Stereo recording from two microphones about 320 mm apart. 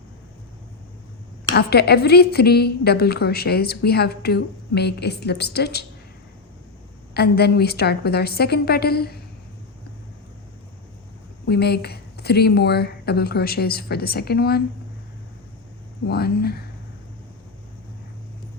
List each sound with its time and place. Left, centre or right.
1.5 s a woman's voice: left
7.1 s speech: left
11.4 s speech: left
16.0 s speech: left